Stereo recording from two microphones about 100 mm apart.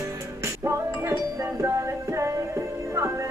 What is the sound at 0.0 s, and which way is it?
Music, 30° right (ahead or behind).